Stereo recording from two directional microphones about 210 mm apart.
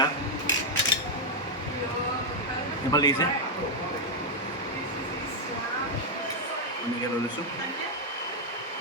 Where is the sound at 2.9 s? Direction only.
20° left (ahead or behind).